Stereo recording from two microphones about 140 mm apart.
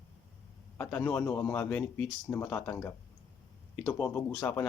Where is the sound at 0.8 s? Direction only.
15° left (ahead or behind).